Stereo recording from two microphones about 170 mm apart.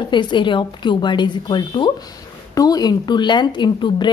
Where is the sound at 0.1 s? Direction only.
25° left (ahead or behind).